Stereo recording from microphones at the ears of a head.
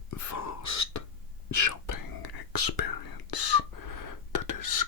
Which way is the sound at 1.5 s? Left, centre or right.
Left.